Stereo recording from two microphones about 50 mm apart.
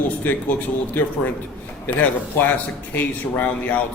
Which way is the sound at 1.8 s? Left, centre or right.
Left.